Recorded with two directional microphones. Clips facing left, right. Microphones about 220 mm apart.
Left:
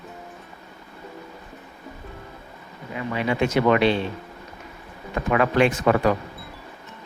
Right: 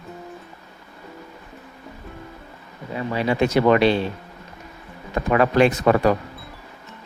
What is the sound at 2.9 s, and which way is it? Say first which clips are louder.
Speech: right 3 dB; 35° right (ahead or behind).